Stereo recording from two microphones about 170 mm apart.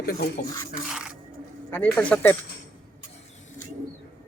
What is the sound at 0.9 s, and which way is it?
Scrape, 5° right (ahead or behind).